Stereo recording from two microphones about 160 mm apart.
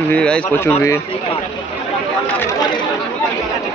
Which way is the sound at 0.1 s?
10° left (ahead or behind).